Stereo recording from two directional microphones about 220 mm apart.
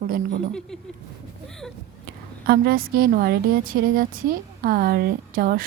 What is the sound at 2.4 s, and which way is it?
A woman's voice, 45° right (ahead or behind).